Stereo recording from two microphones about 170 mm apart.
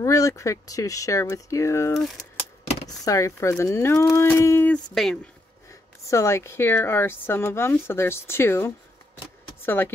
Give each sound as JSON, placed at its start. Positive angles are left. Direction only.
{"t": 0.0, "sound": "speech", "side_deg": 15}
{"t": 2.0, "sound": "speech", "side_deg": 5}
{"t": 3.1, "sound": "speech", "side_deg": 15}
{"t": 5.7, "sound": "speech", "side_deg": 15}